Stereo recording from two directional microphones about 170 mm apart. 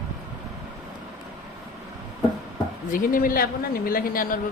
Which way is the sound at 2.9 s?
55° left (ahead or behind).